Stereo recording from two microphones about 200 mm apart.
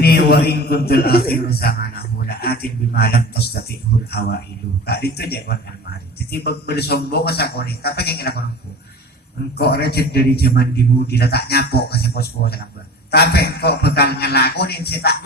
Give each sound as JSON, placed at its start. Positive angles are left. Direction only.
{"t": 0.0, "sound": "a man's voice", "side_deg": 50}
{"t": 9.6, "sound": "a man's voice", "side_deg": 50}